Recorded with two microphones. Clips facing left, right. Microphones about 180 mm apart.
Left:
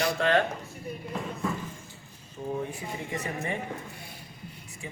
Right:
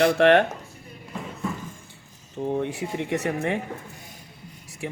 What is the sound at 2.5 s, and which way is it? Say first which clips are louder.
Speech: right 7 dB; 80° right.